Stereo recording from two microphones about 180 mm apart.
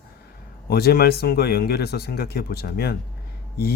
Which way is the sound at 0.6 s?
60° left (ahead or behind).